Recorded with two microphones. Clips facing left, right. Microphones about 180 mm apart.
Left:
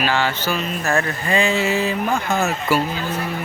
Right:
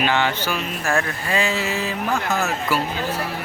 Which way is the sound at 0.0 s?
20° right (ahead or behind).